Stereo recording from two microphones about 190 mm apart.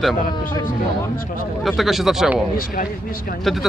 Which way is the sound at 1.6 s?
Centre (ahead or behind).